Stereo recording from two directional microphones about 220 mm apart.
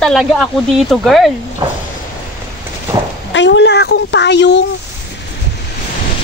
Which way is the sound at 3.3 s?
55° left (ahead or behind).